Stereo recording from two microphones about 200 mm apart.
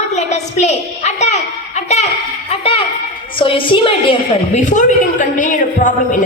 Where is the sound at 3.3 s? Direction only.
25° left (ahead or behind).